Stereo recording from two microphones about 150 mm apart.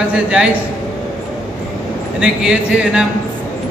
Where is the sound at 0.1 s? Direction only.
5° right (ahead or behind).